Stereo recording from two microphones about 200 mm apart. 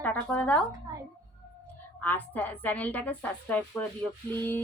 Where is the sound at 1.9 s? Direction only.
10° left (ahead or behind).